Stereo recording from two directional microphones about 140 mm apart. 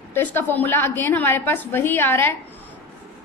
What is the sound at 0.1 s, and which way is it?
A woman's voice, 15° left (ahead or behind).